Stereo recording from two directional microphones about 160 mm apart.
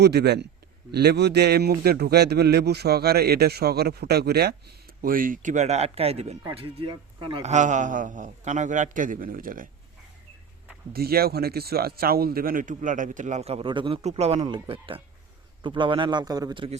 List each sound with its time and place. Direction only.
0.0 s a man's voice: 90° right
4.9 s a man's voice: 60° right (ahead or behind); by 7.4 s 30° right (ahead or behind)
7.4 s a man's voice: 50° right (ahead or behind)
10.9 s a man's voice: 70° right (ahead or behind); by 16.6 s 25° right (ahead or behind)